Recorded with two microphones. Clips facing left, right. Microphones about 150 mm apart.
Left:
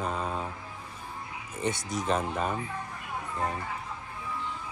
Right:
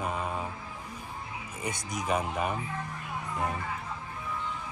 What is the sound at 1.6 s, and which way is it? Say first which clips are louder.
Speech: left 4 dB; 10° right (ahead or behind).